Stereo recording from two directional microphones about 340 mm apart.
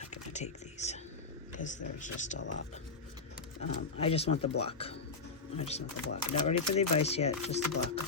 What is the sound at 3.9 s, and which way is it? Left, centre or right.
Speech, centre.